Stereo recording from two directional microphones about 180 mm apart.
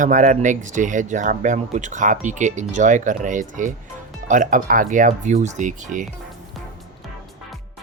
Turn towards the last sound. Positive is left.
turn(degrees=-45)  # may be behind; listen again after turning